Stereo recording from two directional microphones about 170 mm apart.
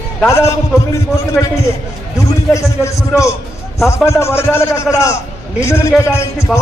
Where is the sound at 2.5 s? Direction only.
15° left (ahead or behind).